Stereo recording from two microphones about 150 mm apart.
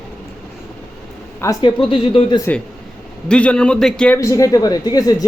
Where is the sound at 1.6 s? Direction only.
35° left (ahead or behind).